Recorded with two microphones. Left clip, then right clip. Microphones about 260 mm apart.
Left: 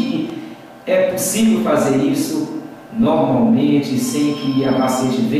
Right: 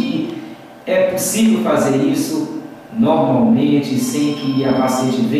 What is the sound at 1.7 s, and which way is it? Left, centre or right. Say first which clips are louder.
Speech: even; centre.